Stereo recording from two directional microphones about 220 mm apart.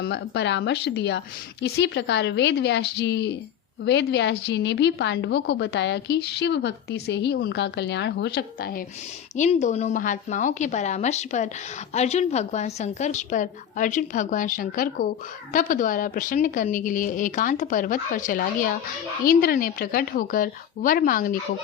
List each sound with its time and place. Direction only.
0.0 s a woman's voice: 55° left (ahead or behind)
9.3 s a woman's voice: 30° left (ahead or behind)